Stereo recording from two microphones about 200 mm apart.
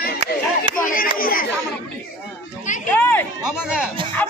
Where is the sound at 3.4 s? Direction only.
5° right (ahead or behind).